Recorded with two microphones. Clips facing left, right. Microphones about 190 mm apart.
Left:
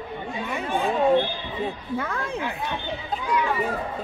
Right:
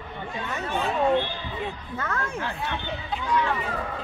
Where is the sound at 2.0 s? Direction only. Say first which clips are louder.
Right 1 dB; 15° left (ahead or behind).